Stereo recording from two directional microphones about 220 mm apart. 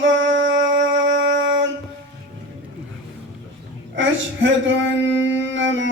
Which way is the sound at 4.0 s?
55° right (ahead or behind).